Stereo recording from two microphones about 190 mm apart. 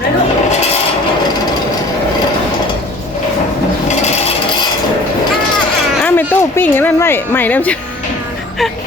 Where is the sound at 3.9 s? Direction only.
35° left (ahead or behind).